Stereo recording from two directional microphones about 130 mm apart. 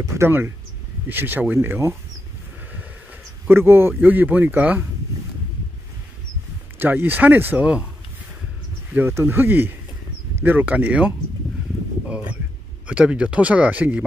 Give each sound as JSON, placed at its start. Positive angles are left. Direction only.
{"t": 0.0, "sound": "speech", "side_deg": -20}
{"t": 3.4, "sound": "speech", "side_deg": -20}
{"t": 6.8, "sound": "speech", "side_deg": -15}
{"t": 8.9, "sound": "speech", "side_deg": -15}
{"t": 12.8, "sound": "speech", "side_deg": -10}